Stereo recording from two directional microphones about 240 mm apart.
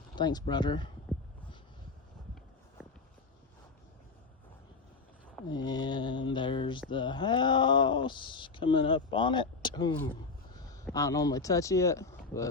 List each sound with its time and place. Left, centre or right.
0.2 s speech: centre
1.1 s a sound: centre
5.5 s speech: centre